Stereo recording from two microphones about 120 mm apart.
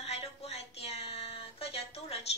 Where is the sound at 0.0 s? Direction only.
60° left (ahead or behind).